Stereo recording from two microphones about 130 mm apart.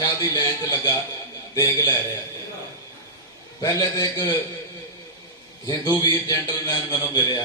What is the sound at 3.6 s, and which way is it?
Speech, 30° left (ahead or behind).